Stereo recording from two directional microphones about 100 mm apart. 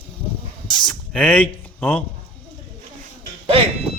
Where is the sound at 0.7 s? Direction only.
10° left (ahead or behind).